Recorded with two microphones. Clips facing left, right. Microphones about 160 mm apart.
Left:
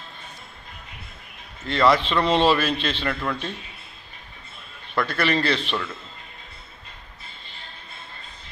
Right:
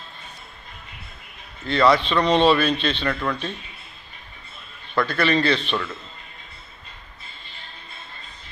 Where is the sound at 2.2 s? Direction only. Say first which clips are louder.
Right 2 dB; 5° left (ahead or behind).